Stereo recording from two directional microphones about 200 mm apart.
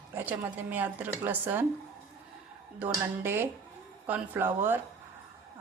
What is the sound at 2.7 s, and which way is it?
A woman's voice, 10° right (ahead or behind).